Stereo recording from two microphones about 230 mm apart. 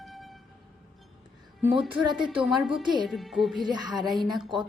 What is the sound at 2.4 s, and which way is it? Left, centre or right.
Music, centre.